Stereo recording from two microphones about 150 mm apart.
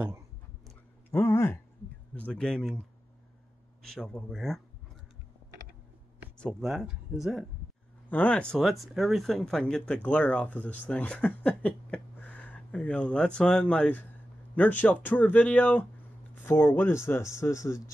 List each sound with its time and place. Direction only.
1.1 s speech: 15° left (ahead or behind)
3.8 s speech: 5° left (ahead or behind)
6.3 s speech: 5° left (ahead or behind)
8.1 s speech: 10° left (ahead or behind)